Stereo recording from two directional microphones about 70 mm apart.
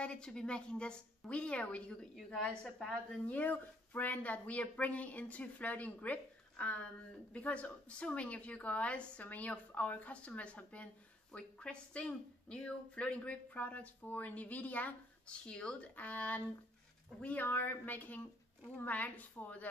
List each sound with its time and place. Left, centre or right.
0.0 s a woman's voice: centre
3.3 s speech: left